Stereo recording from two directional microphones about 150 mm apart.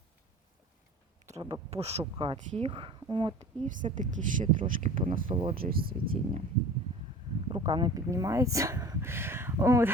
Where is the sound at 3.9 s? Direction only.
60° right (ahead or behind).